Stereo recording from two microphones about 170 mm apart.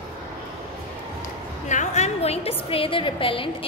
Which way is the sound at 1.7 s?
45° left (ahead or behind).